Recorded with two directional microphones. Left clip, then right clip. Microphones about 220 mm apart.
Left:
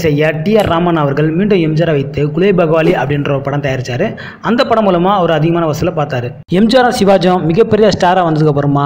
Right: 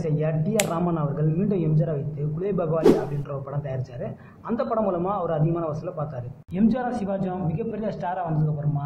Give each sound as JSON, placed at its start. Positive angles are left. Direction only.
{"t": 0.0, "sound": "speech", "side_deg": 30}
{"t": 6.5, "sound": "speech", "side_deg": 40}